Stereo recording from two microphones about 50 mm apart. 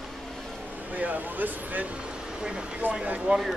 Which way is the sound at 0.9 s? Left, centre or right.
Right.